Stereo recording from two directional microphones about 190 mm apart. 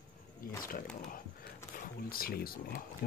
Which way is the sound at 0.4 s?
50° left (ahead or behind).